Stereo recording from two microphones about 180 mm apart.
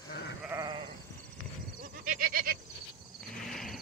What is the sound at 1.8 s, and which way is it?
Goat, 50° right (ahead or behind).